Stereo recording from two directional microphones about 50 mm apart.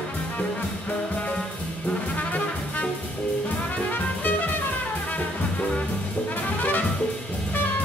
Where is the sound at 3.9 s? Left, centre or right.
Left.